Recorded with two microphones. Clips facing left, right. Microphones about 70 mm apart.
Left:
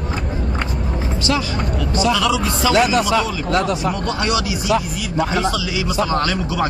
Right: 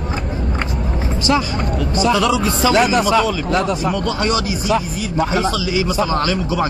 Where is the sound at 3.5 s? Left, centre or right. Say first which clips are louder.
Right 1 dB; centre.